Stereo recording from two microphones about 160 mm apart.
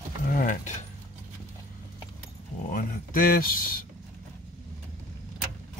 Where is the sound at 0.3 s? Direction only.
55° left (ahead or behind).